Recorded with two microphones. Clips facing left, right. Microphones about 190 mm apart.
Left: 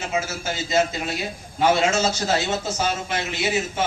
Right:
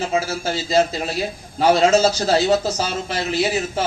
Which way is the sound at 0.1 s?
35° right (ahead or behind).